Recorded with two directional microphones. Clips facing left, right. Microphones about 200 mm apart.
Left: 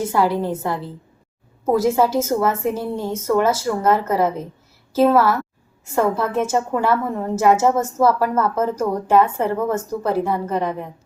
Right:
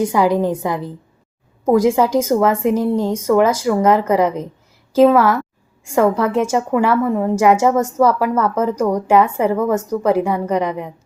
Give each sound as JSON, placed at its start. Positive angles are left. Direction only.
{"t": 0.0, "sound": "a woman's voice", "side_deg": -15}